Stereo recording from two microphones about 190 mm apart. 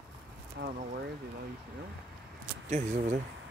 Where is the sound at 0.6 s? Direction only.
65° right (ahead or behind).